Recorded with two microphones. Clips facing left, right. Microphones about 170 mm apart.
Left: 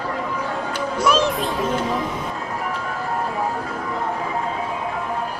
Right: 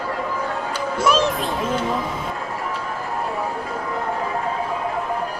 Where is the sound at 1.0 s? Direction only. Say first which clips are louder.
Even; centre (ahead or behind).